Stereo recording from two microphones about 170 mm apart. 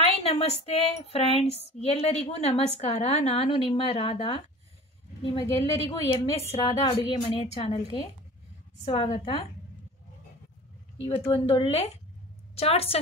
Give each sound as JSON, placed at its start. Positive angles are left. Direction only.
{"t": 0.0, "sound": "a woman's voice", "side_deg": 35}
{"t": 6.7, "sound": "speech", "side_deg": 20}
{"t": 7.2, "sound": "a woman's voice", "side_deg": 35}
{"t": 11.1, "sound": "a woman's voice", "side_deg": 35}